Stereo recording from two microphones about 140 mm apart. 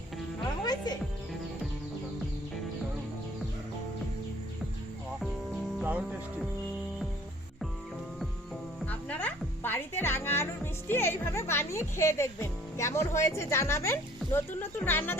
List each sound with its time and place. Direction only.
0.6 s music: 30° left (ahead or behind)
5.8 s music: 10° right (ahead or behind)
8.9 s music: 10° left (ahead or behind)